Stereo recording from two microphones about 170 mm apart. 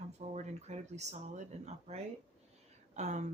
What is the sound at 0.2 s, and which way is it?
Speech, 40° right (ahead or behind).